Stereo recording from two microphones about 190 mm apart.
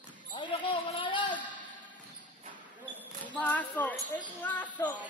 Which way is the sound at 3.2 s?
10° left (ahead or behind).